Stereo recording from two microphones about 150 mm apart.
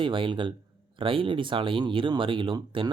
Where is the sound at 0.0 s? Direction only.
35° right (ahead or behind).